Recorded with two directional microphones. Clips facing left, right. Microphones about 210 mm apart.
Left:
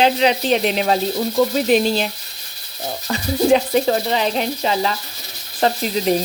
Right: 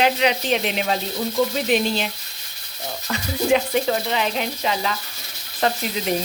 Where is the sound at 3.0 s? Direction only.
35° left (ahead or behind).